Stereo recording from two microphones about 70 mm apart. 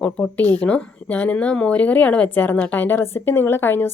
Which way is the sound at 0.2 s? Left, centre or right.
Left.